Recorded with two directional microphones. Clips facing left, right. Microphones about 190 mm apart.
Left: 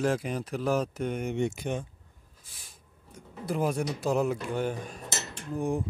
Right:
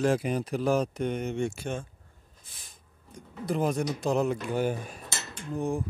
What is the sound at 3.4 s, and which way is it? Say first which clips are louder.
Speech: right 1 dB; 10° left (ahead or behind).